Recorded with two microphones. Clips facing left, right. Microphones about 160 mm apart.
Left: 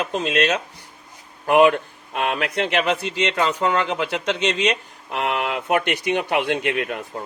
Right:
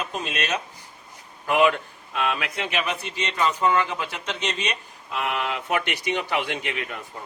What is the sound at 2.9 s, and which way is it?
Speech, 90° left.